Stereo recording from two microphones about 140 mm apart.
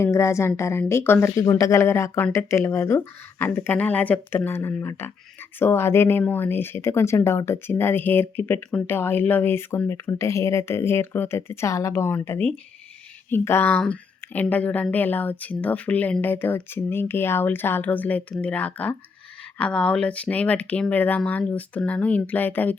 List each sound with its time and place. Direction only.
0.0 s a woman's voice: 20° left (ahead or behind)